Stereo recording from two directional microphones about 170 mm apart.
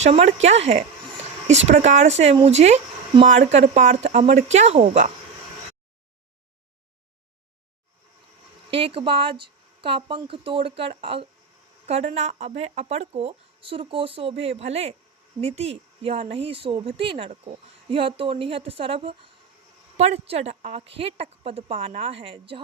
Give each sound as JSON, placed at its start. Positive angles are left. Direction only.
{"t": 0.0, "sound": "speech", "side_deg": -40}
{"t": 8.7, "sound": "speech", "side_deg": -30}